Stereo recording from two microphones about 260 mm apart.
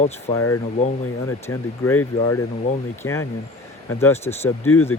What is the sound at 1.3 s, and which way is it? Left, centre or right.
Speech, centre.